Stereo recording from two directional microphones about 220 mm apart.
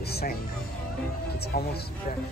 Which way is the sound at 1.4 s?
45° left (ahead or behind).